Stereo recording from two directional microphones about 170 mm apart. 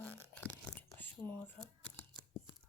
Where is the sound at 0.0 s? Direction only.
10° left (ahead or behind).